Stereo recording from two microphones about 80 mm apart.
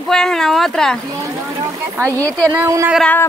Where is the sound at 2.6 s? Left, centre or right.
Right.